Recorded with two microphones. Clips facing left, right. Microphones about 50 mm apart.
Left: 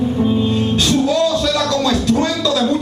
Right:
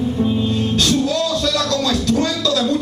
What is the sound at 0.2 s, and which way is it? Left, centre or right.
Music, centre.